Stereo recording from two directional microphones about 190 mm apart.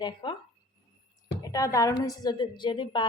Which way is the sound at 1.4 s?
20° left (ahead or behind).